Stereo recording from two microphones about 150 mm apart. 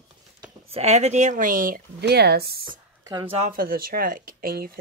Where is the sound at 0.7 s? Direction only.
45° right (ahead or behind); by 2.6 s 90° right.